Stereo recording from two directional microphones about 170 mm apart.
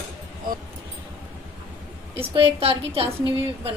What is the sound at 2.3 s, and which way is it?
Speech, 35° right (ahead or behind).